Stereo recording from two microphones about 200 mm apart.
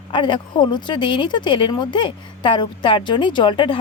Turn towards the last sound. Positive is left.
turn(degrees=25)  # may be behind; listen again after turning